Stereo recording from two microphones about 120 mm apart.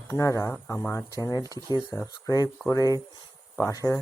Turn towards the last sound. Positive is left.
turn(degrees=30)  # may be behind; listen again after turning